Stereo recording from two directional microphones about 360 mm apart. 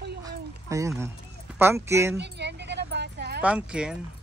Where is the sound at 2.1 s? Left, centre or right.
Right.